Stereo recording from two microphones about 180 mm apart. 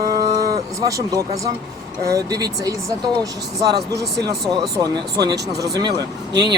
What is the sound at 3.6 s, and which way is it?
Speech, 65° right (ahead or behind).